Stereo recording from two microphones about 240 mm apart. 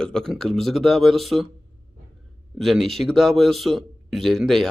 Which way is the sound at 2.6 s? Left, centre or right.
Centre.